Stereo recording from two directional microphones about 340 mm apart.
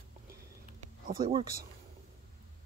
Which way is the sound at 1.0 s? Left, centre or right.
Right.